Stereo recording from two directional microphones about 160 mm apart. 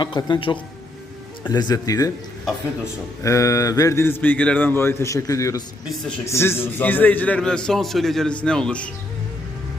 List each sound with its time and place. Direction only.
0.0 s speech: 30° left (ahead or behind)
3.2 s a man's voice: 20° left (ahead or behind)